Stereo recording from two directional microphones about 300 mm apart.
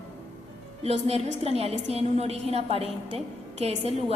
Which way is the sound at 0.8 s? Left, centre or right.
Right.